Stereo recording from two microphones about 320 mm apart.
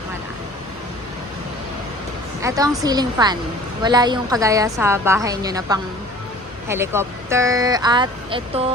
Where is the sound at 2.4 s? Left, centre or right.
Centre.